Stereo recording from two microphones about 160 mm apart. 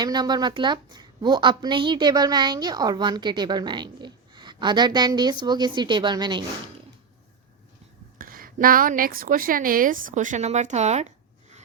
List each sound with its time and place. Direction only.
0.0 s a woman's voice: 25° right (ahead or behind)
8.2 s a woman's voice: 65° right (ahead or behind); by 11.1 s 45° right (ahead or behind)